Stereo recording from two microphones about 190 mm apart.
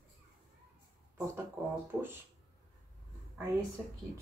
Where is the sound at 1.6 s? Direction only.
10° right (ahead or behind).